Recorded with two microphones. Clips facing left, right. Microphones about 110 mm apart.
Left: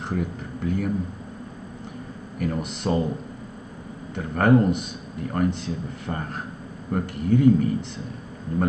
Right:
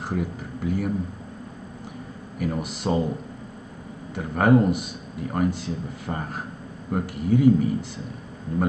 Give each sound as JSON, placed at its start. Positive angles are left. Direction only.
{"t": 0.0, "sound": "speech", "side_deg": -5}
{"t": 2.3, "sound": "speech", "side_deg": -5}
{"t": 4.1, "sound": "speech", "side_deg": -5}